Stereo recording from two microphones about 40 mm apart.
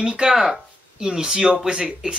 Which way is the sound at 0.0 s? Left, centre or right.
Right.